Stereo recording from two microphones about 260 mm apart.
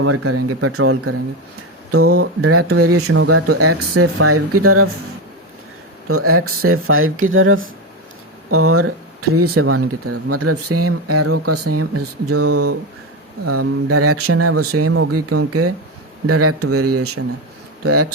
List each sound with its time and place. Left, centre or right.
0.0 s speech: right
6.1 s speech: right